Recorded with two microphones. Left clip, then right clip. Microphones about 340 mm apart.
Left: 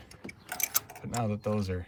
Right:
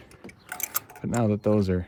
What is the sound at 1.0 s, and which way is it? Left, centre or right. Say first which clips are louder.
Speech: right 10 dB; right.